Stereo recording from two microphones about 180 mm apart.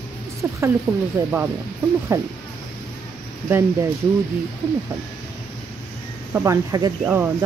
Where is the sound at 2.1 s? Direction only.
20° right (ahead or behind).